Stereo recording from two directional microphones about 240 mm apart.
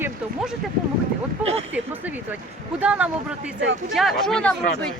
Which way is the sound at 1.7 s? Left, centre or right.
Centre.